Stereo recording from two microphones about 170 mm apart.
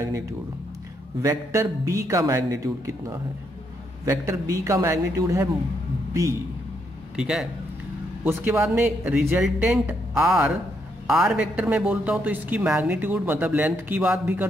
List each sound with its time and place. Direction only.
1.2 s speech: 15° right (ahead or behind)
7.2 s speech: 5° right (ahead or behind)